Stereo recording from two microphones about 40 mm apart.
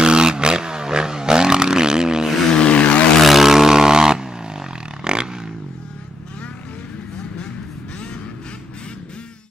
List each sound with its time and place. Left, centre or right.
0.0 s vehicle: right
2.5 s vehicle: left
3.2 s roar: centre